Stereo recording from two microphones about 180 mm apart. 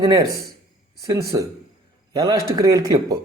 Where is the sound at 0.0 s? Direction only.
20° right (ahead or behind).